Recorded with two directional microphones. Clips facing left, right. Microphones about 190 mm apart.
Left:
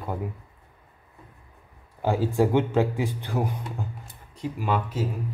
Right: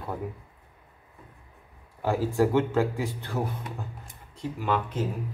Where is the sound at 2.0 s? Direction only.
20° left (ahead or behind).